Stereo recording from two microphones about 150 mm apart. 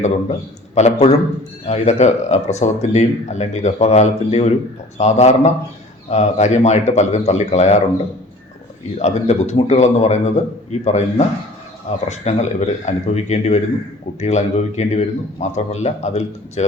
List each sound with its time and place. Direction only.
0.7 s a man's voice: 50° left (ahead or behind)
9.0 s speech: 45° left (ahead or behind)